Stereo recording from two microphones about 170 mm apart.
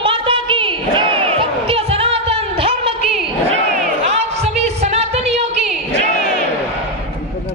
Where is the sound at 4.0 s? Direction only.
40° right (ahead or behind).